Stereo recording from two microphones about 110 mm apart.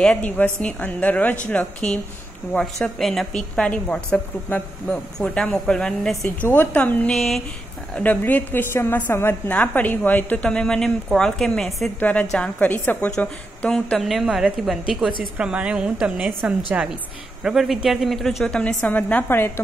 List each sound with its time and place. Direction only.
0.0 s a woman's voice: 10° left (ahead or behind)
7.2 s a woman's voice: centre (ahead or behind)
7.9 s a woman's voice: 15° left (ahead or behind)